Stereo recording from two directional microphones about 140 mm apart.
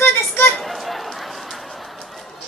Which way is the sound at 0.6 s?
Centre (ahead or behind).